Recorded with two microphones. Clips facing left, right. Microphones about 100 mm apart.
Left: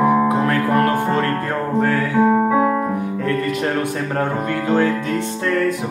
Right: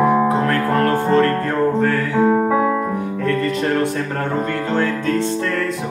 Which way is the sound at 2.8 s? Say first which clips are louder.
Even; 15° left (ahead or behind).